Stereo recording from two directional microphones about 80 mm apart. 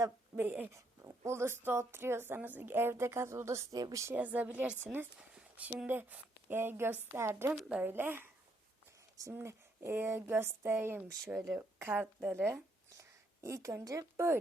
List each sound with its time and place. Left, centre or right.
0.3 s speech: centre
0.7 s speech: right
3.8 s speech: right
4.1 s a woman's voice: right
7.5 s speech: centre
7.8 s speech: right
9.3 s speech: right
13.0 s a sound: right
13.8 s speech: right